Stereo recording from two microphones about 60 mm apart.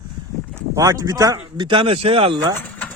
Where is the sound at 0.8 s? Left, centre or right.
Right.